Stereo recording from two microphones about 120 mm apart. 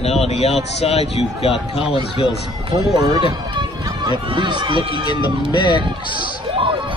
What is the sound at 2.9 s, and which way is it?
Speech, 40° right (ahead or behind).